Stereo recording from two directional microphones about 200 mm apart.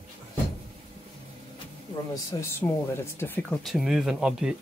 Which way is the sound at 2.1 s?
15° left (ahead or behind).